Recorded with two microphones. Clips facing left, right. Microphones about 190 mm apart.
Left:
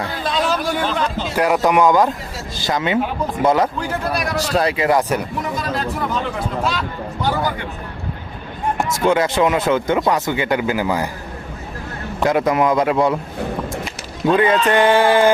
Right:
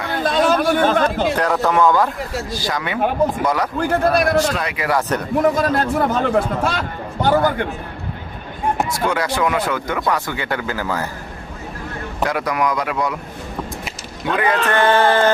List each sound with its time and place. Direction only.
0.1 s chatter: 50° right (ahead or behind)
1.4 s speech: 15° left (ahead or behind)
3.8 s a man's voice: 55° right (ahead or behind)
4.5 s speech: 35° left (ahead or behind)
4.9 s speech: 15° left (ahead or behind)
5.4 s a man's voice: 50° right (ahead or behind)
9.0 s speech: 25° left (ahead or behind)
12.2 s speech: 25° left (ahead or behind)
14.3 s speech: 25° left (ahead or behind)